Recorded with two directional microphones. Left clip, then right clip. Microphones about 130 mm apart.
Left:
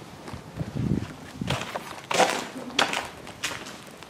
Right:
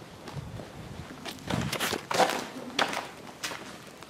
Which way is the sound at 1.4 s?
10° left (ahead or behind).